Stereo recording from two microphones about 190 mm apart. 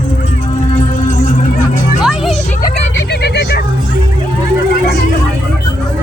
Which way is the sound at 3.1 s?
60° left (ahead or behind).